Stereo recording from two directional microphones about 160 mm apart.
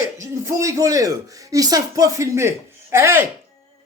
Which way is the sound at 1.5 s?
25° right (ahead or behind).